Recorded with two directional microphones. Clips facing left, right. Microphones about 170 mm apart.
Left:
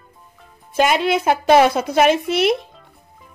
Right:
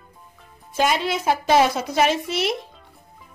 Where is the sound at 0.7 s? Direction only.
60° left (ahead or behind).